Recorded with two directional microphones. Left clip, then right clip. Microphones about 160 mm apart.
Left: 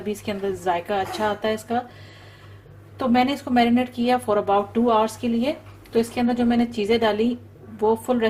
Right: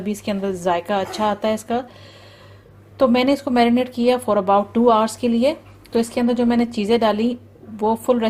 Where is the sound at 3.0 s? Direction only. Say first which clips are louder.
Right 4 dB; 55° right (ahead or behind).